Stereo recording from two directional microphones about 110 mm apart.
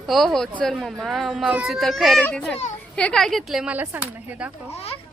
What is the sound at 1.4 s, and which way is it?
Speech, 15° right (ahead or behind).